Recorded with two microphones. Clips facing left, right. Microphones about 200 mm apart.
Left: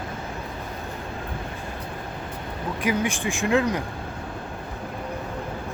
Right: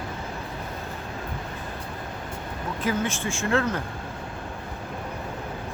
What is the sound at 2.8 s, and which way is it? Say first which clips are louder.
Speech: left 2 dB; 15° left (ahead or behind).